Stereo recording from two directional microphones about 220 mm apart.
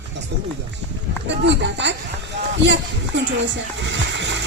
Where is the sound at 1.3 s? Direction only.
55° right (ahead or behind).